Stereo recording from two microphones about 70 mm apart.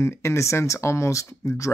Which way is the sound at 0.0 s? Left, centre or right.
Left.